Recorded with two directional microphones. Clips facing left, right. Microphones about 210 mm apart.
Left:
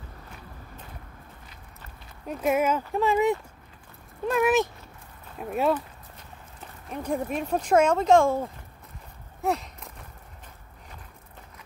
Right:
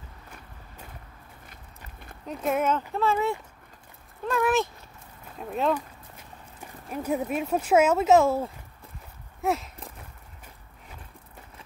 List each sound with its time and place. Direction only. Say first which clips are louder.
2.2 s speech: left 2 dB; 10° left (ahead or behind)
6.6 s speech: right 2 dB; 5° right (ahead or behind)